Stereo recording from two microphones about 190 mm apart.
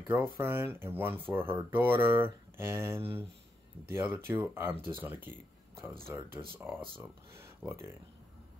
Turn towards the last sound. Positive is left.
turn(degrees=-15)  # may be behind; listen again after turning